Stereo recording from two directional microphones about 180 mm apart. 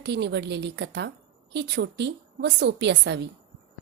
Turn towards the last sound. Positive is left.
turn(degrees=-70)  # may be behind; listen again after turning